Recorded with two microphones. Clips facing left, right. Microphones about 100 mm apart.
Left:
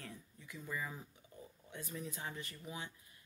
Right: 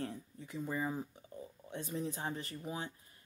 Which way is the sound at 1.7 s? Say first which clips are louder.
Right 7 dB; 30° right (ahead or behind).